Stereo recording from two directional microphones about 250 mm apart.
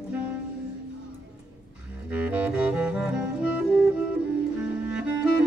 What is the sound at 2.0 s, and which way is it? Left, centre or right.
Music, centre.